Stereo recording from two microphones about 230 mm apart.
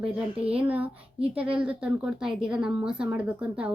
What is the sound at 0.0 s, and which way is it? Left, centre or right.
Speech, centre.